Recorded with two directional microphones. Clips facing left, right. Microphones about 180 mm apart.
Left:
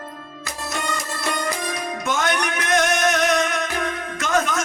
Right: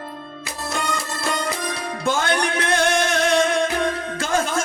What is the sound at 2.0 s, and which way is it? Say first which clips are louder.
Music: right 3 dB; 30° right (ahead or behind).